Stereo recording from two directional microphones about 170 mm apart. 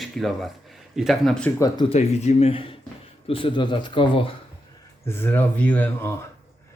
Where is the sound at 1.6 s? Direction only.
25° left (ahead or behind).